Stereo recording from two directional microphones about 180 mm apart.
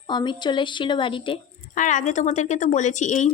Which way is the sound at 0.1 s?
25° left (ahead or behind).